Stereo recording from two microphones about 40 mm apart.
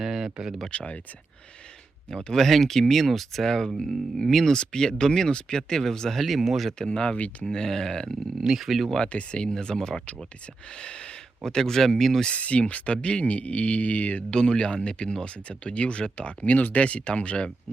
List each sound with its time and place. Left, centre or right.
0.0 s speech: centre
0.7 s speech: left
2.0 s speech: centre
2.4 s speech: centre
4.5 s speech: left; by 6.7 s centre
6.7 s speech: centre
8.4 s speech: centre
9.1 s speech: left; by 12.2 s centre
12.3 s speech: left
14.3 s speech: left
16.4 s speech: left
16.7 s speech: left